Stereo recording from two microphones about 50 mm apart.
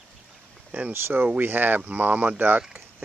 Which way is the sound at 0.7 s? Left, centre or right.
Right.